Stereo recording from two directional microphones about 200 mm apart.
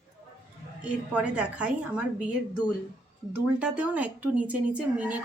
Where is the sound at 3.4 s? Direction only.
5° right (ahead or behind).